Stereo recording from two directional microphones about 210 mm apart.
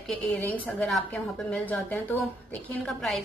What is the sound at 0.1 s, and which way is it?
A woman's voice, 5° left (ahead or behind).